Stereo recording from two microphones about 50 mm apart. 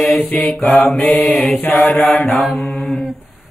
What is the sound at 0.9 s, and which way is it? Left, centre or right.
Mantra, left.